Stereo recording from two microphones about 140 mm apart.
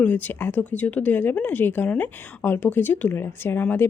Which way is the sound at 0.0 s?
10° left (ahead or behind).